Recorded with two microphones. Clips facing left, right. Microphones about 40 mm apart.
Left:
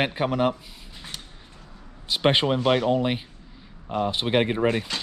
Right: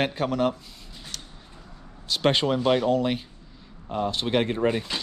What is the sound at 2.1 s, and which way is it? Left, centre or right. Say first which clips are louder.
Speech: left 1 dB; left.